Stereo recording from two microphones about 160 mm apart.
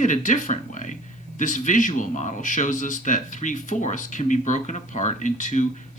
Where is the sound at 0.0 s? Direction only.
50° left (ahead or behind).